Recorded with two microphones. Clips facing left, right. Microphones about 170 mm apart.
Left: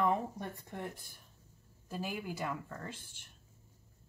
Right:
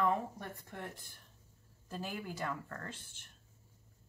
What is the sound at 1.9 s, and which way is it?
Speech, 10° left (ahead or behind).